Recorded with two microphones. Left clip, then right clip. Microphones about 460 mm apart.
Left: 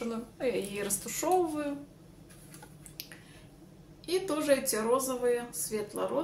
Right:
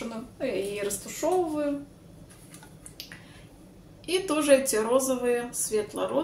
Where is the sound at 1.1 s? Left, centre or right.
Left.